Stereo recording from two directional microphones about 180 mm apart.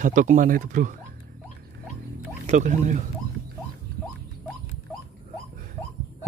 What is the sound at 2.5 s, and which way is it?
Speech, 45° right (ahead or behind).